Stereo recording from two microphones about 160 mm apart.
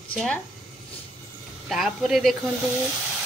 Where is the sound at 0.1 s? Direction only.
5° left (ahead or behind).